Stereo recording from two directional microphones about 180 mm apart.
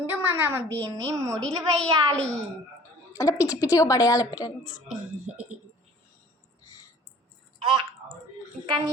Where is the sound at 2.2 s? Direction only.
5° left (ahead or behind).